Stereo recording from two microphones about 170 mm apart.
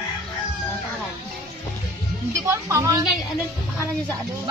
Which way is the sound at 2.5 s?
15° right (ahead or behind).